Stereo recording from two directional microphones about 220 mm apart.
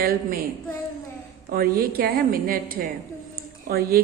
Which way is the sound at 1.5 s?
45° right (ahead or behind).